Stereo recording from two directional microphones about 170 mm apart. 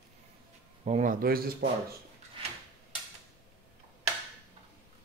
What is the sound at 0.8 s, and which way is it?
Speech, 45° right (ahead or behind).